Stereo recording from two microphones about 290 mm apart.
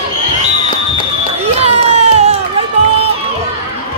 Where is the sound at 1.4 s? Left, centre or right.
Right.